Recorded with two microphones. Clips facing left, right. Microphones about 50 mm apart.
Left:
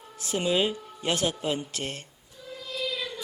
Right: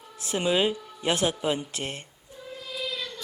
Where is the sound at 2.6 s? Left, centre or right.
Centre.